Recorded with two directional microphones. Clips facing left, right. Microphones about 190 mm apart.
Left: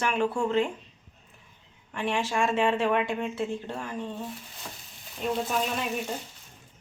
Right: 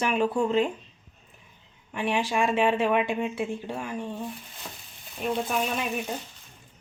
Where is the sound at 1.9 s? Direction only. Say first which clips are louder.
Right 2 dB; 15° right (ahead or behind).